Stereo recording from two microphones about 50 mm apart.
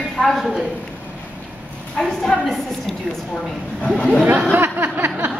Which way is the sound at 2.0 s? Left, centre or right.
Centre.